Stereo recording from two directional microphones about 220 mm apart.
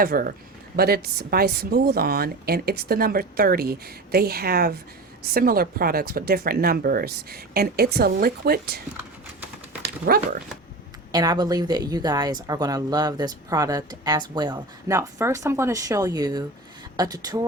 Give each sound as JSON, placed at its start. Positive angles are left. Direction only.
{"t": 0.0, "sound": "a woman's voice", "side_deg": -40}
{"t": 10.1, "sound": "speech", "side_deg": -40}
{"t": 11.1, "sound": "a woman's voice", "side_deg": -20}